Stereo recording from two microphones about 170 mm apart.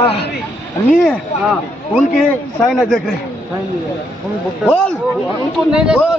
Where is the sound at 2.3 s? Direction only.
5° left (ahead or behind).